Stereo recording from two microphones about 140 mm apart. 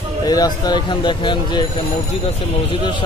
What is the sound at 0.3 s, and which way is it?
Speech, 30° left (ahead or behind).